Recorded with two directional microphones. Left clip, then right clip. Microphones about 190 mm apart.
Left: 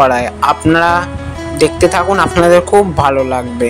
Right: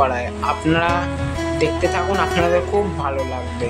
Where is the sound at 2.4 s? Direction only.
40° left (ahead or behind).